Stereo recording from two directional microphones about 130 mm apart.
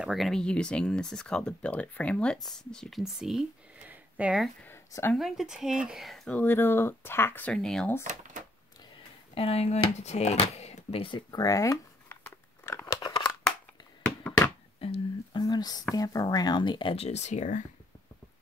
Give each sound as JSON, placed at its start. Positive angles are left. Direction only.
{"t": 0.0, "sound": "speech", "side_deg": 0}
{"t": 4.6, "sound": "a sound", "side_deg": 15}
{"t": 5.1, "sound": "speech", "side_deg": 0}
{"t": 6.3, "sound": "speech", "side_deg": 15}
{"t": 8.0, "sound": "a sound", "side_deg": -75}
{"t": 9.3, "sound": "speech", "side_deg": 50}
{"t": 12.6, "sound": "scissors", "side_deg": 20}
{"t": 14.8, "sound": "a sound", "side_deg": 45}
{"t": 15.4, "sound": "whispering", "side_deg": 30}
{"t": 15.9, "sound": "speech", "side_deg": 30}
{"t": 16.9, "sound": "speech", "side_deg": 55}